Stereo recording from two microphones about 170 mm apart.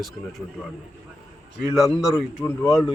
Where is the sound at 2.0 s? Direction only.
Centre (ahead or behind).